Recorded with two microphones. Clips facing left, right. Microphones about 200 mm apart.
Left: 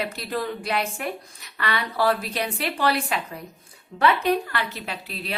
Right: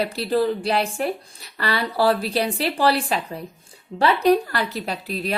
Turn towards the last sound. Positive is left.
turn(degrees=-40)  # may be behind; listen again after turning